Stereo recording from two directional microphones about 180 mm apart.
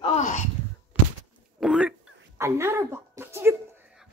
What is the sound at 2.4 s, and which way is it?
A woman's voice, 15° right (ahead or behind).